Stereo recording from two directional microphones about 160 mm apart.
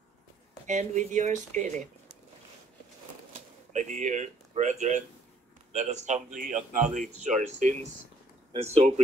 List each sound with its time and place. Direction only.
0.7 s speech: 50° right (ahead or behind)
3.3 s speech: 50° right (ahead or behind)